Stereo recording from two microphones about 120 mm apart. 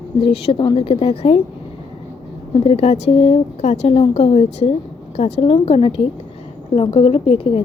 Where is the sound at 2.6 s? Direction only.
60° left (ahead or behind).